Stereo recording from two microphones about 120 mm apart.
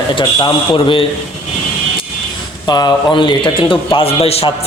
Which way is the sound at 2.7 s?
35° left (ahead or behind).